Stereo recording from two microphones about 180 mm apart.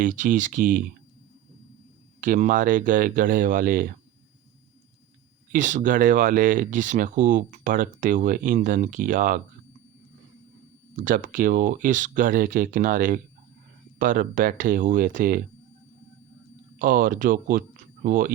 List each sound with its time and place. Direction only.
0.0 s speech: 45° right (ahead or behind)
2.2 s speech: 50° right (ahead or behind)
5.5 s speech: 45° right (ahead or behind)
10.9 s speech: 45° right (ahead or behind)
16.7 s speech: 50° right (ahead or behind)